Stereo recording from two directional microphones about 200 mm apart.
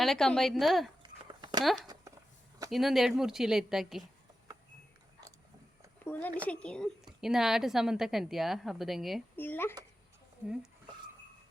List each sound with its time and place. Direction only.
0.0 s a woman's voice: centre (ahead or behind)
1.0 s a sound: 20° right (ahead or behind)
1.6 s a woman's voice: centre (ahead or behind)
6.2 s a woman's voice: 5° left (ahead or behind)
9.3 s speech: 10° left (ahead or behind)
10.4 s a woman's voice: 5° right (ahead or behind)